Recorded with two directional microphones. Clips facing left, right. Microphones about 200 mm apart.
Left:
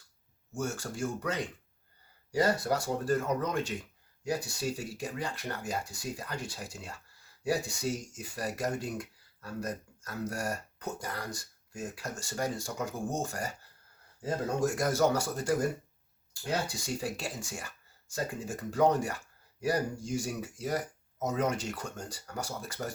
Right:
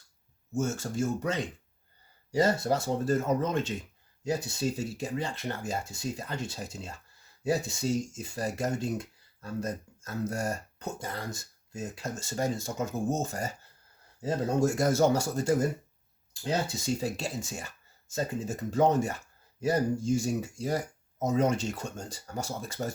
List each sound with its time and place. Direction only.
0.5 s speech: 25° right (ahead or behind)